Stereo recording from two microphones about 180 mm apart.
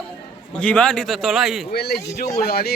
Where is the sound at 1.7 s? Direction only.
60° left (ahead or behind).